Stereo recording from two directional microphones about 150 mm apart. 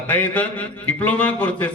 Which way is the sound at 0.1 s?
10° left (ahead or behind).